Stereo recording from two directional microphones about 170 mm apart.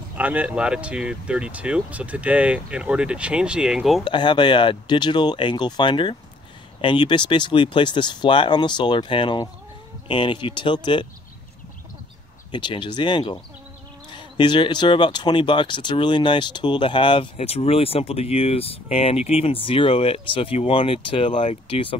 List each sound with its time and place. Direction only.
0.1 s speech: 10° right (ahead or behind)
4.0 s speech: 25° left (ahead or behind)
12.4 s speech: 30° left (ahead or behind)